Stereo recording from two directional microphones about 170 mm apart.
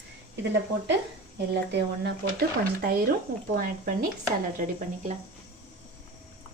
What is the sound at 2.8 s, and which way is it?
Speech, 65° right (ahead or behind).